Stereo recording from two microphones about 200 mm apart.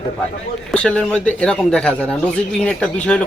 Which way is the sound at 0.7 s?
5° left (ahead or behind).